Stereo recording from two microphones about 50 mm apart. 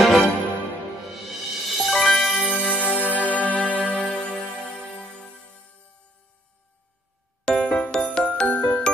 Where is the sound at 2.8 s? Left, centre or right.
Left; by 4.4 s centre.